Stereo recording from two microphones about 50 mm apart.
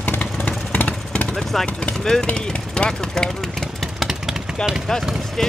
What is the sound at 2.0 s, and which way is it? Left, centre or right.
Speech, centre.